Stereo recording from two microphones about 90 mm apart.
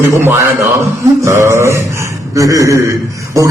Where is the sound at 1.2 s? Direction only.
35° right (ahead or behind).